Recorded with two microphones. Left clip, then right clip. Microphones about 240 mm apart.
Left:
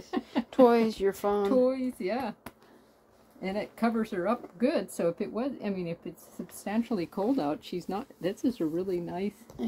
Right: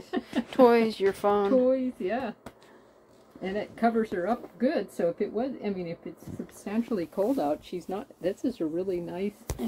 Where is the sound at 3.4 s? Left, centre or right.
Left.